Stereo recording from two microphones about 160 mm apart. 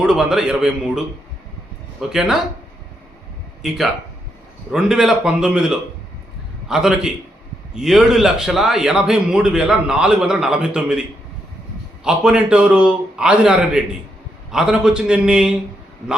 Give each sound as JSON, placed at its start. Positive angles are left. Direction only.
{"t": 0.0, "sound": "a man's voice", "side_deg": -5}
{"t": 3.6, "sound": "a man's voice", "side_deg": 0}
{"t": 12.0, "sound": "a man's voice", "side_deg": -5}